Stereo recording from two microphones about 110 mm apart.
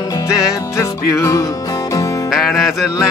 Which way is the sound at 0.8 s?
30° left (ahead or behind).